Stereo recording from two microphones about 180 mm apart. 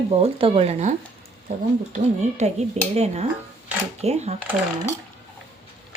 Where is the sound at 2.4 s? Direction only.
35° right (ahead or behind).